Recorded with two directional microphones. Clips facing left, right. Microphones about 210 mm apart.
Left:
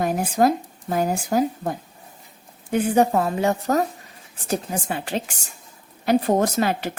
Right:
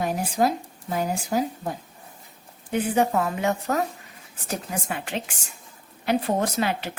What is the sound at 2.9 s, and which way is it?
A woman's voice, 40° left (ahead or behind).